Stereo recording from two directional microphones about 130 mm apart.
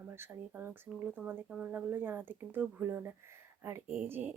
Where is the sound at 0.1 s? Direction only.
20° right (ahead or behind).